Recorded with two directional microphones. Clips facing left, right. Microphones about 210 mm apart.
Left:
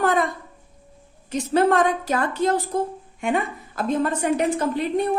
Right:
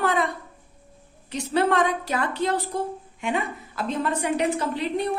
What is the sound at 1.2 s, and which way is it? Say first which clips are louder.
A woman's voice: left 4 dB; 45° left (ahead or behind).